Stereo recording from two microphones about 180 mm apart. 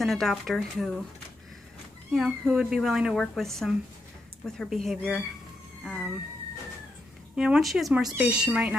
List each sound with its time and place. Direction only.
0.0 s speech: centre (ahead or behind)
2.1 s speech: 5° right (ahead or behind)
7.3 s speech: 5° right (ahead or behind)